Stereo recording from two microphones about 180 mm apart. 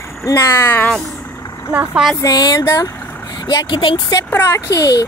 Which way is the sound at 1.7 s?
10° right (ahead or behind).